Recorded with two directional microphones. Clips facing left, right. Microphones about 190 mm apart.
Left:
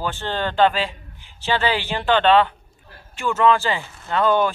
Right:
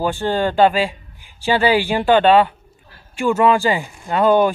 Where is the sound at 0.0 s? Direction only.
10° right (ahead or behind).